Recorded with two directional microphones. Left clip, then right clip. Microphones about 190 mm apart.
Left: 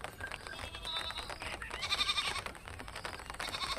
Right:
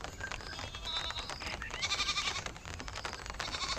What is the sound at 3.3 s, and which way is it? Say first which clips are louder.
Sheep: even; centre (ahead or behind).